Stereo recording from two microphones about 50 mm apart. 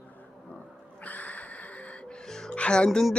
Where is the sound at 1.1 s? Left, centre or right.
Left.